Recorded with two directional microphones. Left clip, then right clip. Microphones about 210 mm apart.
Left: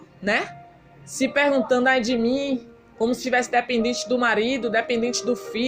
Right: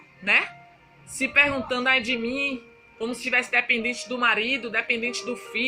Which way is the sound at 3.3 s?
10° right (ahead or behind).